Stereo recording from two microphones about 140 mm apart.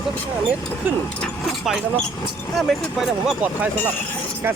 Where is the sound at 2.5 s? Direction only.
Centre (ahead or behind).